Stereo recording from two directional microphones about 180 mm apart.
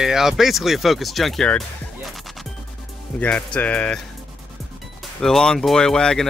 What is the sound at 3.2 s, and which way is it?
Speech, 5° left (ahead or behind).